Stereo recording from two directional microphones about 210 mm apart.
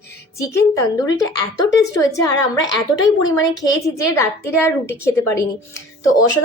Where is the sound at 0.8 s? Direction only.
15° left (ahead or behind).